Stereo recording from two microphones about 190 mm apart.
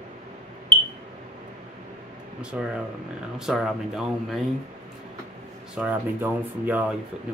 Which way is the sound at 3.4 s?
Centre (ahead or behind).